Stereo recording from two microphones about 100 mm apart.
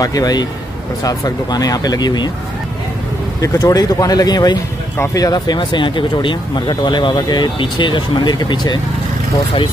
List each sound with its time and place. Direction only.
0.0 s speech: 40° left (ahead or behind)
3.3 s speech: 35° left (ahead or behind)